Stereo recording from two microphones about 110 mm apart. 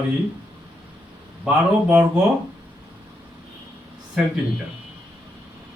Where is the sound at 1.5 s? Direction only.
15° right (ahead or behind).